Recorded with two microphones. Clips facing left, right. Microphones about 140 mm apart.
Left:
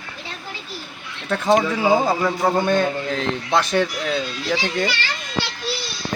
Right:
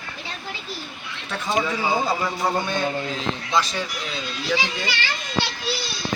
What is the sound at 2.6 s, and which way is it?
A man's voice, 55° left (ahead or behind).